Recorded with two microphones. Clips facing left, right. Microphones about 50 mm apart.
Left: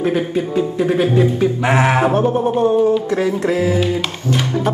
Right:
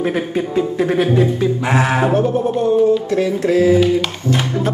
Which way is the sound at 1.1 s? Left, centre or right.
Left.